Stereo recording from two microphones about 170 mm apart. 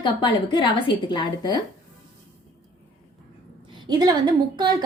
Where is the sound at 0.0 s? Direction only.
30° left (ahead or behind).